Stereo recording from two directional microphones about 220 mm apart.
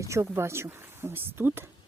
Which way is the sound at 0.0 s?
15° right (ahead or behind).